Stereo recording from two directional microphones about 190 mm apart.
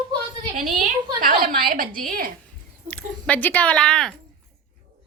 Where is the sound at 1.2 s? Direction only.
45° right (ahead or behind).